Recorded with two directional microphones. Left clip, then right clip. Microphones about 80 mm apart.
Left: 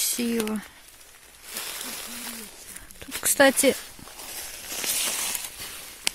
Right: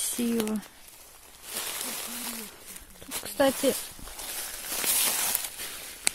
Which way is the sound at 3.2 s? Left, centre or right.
Left.